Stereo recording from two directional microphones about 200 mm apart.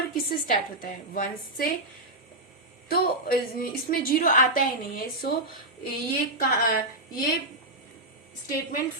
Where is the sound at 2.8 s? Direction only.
50° left (ahead or behind).